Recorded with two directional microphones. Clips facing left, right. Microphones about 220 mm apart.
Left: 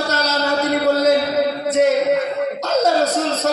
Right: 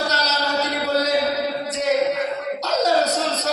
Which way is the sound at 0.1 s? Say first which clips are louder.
Left 4 dB; 50° left (ahead or behind).